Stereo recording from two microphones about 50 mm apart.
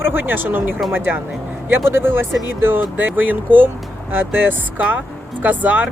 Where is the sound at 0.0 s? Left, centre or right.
Right.